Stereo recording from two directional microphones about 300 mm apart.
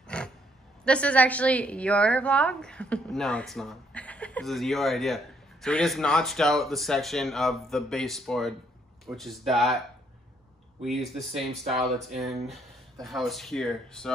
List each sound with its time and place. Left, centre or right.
0.0 s gasp: centre
0.8 s a woman's voice: centre
10.8 s a woman's voice: centre